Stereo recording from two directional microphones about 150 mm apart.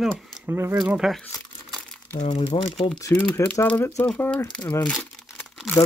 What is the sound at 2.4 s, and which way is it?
Speech, 40° left (ahead or behind).